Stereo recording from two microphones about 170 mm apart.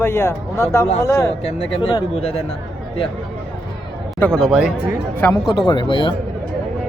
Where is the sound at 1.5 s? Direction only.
35° left (ahead or behind).